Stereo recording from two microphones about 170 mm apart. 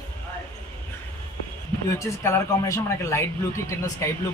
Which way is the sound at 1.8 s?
15° left (ahead or behind).